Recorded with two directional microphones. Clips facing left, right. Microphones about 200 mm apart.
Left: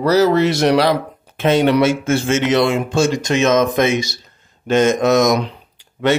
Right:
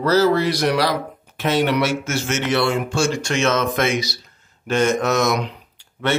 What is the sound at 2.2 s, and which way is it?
Speech, 20° left (ahead or behind).